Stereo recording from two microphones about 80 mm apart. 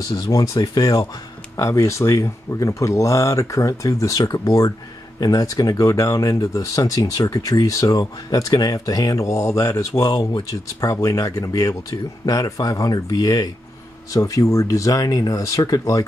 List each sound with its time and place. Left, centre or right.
0.0 s speech: left